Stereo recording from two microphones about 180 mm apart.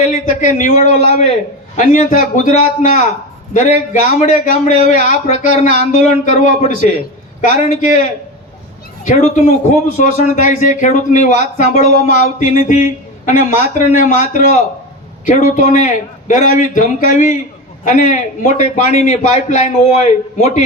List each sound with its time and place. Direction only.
0.1 s a man's voice: 45° left (ahead or behind)
9.0 s a man's voice: 45° left (ahead or behind)
15.2 s a man's voice: 45° left (ahead or behind)